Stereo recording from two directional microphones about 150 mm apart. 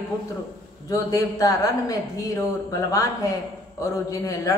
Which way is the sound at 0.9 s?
25° left (ahead or behind).